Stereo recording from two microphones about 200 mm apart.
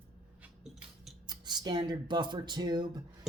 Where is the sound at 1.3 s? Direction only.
20° right (ahead or behind).